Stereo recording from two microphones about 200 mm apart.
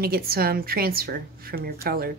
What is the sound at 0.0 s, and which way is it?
A woman's voice, 50° right (ahead or behind).